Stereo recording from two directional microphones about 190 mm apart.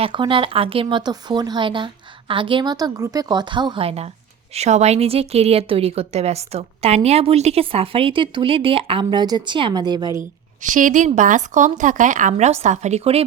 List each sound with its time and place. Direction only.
0.0 s a woman's voice: 25° right (ahead or behind)
10.6 s a woman's voice: 45° right (ahead or behind)